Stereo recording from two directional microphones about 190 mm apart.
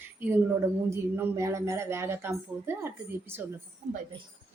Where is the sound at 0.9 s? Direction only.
15° right (ahead or behind).